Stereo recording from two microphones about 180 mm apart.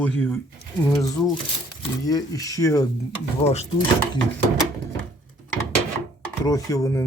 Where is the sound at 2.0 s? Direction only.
20° left (ahead or behind).